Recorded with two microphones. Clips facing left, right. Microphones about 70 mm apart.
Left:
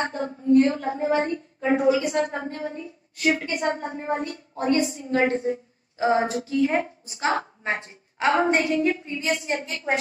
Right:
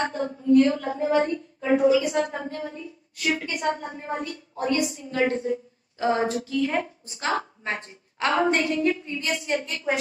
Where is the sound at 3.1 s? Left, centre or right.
Left.